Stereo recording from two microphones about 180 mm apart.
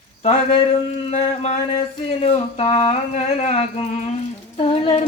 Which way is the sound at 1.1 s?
35° left (ahead or behind).